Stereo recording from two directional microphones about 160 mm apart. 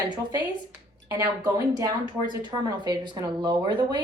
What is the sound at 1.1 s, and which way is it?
Speech, 20° right (ahead or behind).